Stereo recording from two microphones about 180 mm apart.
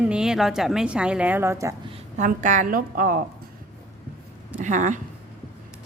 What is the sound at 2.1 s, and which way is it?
A woman's voice, 45° right (ahead or behind).